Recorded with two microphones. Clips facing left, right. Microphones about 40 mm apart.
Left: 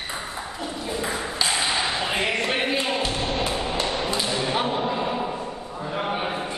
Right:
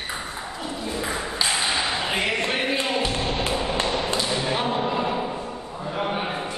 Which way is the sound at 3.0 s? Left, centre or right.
Centre.